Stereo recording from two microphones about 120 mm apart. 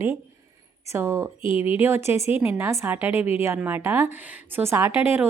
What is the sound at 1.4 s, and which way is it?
Speech, 50° left (ahead or behind).